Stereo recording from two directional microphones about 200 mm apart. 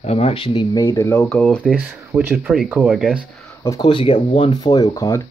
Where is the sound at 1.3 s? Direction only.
5° left (ahead or behind).